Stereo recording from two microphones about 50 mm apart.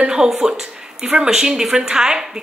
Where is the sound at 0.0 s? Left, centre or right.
Centre.